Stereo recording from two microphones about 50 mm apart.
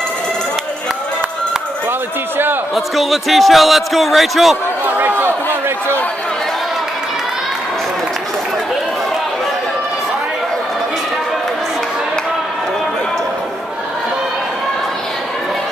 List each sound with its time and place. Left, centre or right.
1.9 s a sound: right
2.7 s a man's voice: centre
4.8 s chatter: right